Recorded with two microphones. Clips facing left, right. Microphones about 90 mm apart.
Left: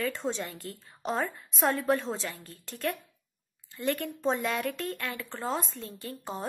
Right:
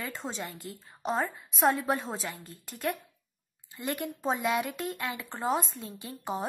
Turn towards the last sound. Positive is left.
turn(degrees=-15)  # may be behind; listen again after turning